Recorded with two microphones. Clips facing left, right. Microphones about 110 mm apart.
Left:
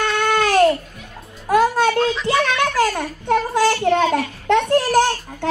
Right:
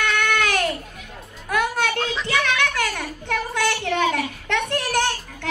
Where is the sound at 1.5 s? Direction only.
35° left (ahead or behind).